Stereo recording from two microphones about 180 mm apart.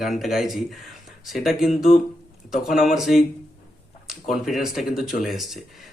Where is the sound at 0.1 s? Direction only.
Centre (ahead or behind).